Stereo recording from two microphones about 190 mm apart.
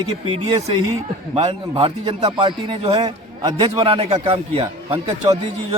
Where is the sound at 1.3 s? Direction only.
30° right (ahead or behind).